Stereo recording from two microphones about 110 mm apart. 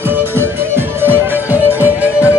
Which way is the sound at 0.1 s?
20° right (ahead or behind).